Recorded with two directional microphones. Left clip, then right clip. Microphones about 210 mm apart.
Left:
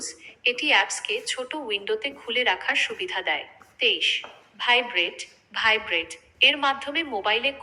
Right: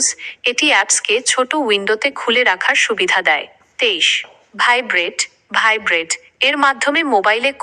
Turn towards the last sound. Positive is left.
turn(degrees=-45)  # may be behind; listen again after turning